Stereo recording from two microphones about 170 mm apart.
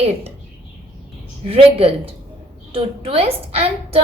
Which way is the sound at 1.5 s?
35° right (ahead or behind).